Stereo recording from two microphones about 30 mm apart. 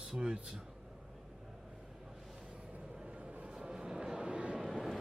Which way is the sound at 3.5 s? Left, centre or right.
Right.